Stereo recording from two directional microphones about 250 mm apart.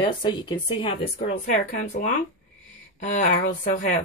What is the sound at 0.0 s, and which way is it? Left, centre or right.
Speech, centre.